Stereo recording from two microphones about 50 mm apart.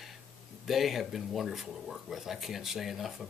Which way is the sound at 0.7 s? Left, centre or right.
Centre.